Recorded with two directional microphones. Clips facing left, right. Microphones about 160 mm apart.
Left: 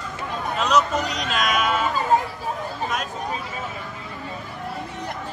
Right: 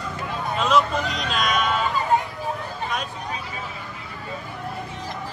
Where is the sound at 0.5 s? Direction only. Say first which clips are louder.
Even; centre (ahead or behind).